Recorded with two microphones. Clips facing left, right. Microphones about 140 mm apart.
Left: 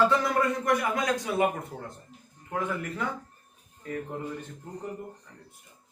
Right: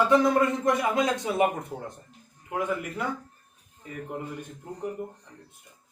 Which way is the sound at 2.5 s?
10° right (ahead or behind).